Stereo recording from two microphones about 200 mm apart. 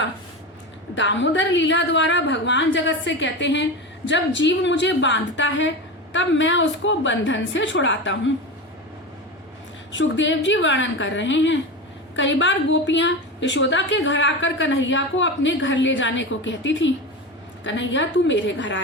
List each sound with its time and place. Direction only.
0.9 s a woman's voice: 65° left (ahead or behind)
9.9 s a woman's voice: 65° left (ahead or behind)